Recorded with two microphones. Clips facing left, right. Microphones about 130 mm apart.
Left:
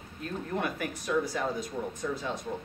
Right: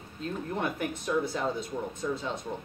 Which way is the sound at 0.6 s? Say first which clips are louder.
Even; 25° right (ahead or behind).